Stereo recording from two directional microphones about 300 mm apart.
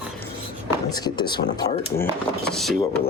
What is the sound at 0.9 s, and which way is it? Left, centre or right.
Speech, centre.